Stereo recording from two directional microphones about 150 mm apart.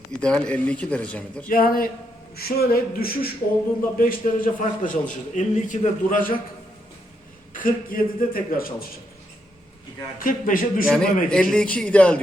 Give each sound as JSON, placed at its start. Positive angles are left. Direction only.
{"t": 0.2, "sound": "speech", "side_deg": 5}
{"t": 1.5, "sound": "a man's voice", "side_deg": 75}
{"t": 2.3, "sound": "a man's voice", "side_deg": 90}
{"t": 3.9, "sound": "a man's voice", "side_deg": 65}
{"t": 7.5, "sound": "a man's voice", "side_deg": 65}
{"t": 10.2, "sound": "a man's voice", "side_deg": 65}
{"t": 10.8, "sound": "a man's voice", "side_deg": 5}